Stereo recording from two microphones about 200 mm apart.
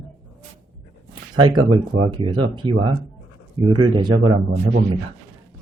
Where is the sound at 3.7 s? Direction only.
20° right (ahead or behind).